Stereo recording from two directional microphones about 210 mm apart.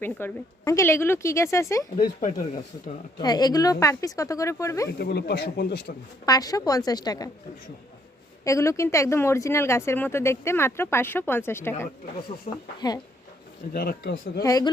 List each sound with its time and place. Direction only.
0.0 s a woman's voice: 10° left (ahead or behind)
3.2 s a woman's voice: 20° left (ahead or behind)
4.9 s speech: 50° left (ahead or behind)
6.2 s a woman's voice: 20° left (ahead or behind)
8.4 s a woman's voice: 15° left (ahead or behind)
12.5 s speech: 35° left (ahead or behind)
12.8 s speech: 20° left (ahead or behind)
13.7 s speech: 50° left (ahead or behind)
14.4 s a woman's voice: 15° left (ahead or behind)